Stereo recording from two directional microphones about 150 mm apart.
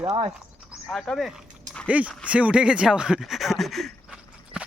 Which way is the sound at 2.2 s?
10° right (ahead or behind).